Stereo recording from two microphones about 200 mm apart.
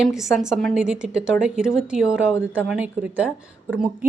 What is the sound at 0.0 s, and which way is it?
Speech, centre (ahead or behind).